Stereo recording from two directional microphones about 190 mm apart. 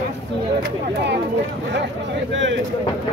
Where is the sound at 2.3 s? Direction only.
75° right (ahead or behind).